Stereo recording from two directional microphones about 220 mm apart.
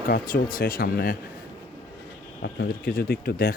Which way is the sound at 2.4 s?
45° left (ahead or behind).